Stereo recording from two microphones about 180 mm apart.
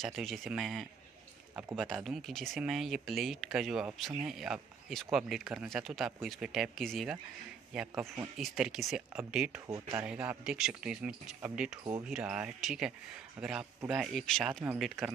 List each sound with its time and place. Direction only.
0.0 s speech: centre (ahead or behind)
9.7 s speech: 20° right (ahead or behind)
10.0 s speech: 5° right (ahead or behind)